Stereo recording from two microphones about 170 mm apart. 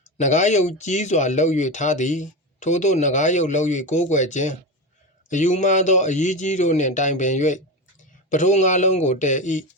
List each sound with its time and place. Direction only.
0.0 s speech: 45° left (ahead or behind)